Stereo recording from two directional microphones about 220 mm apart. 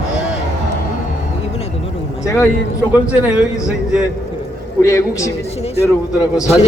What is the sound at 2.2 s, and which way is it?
Speech, 15° left (ahead or behind).